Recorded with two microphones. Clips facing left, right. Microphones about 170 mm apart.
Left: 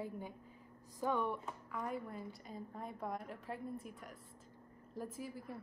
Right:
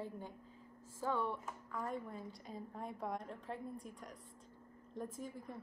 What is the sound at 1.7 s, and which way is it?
Speech, 5° left (ahead or behind).